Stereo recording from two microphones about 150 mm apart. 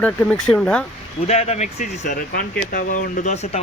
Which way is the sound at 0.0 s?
10° left (ahead or behind).